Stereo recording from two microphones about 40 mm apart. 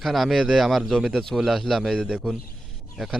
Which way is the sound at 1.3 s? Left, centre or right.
Centre.